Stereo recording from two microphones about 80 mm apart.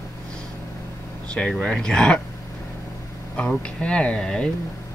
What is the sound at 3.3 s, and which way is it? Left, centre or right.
Speech, centre.